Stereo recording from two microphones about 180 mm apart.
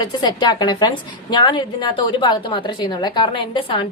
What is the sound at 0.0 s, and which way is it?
A woman's voice, 25° left (ahead or behind).